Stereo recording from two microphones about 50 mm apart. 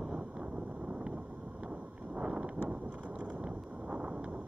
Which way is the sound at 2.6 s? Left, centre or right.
Right.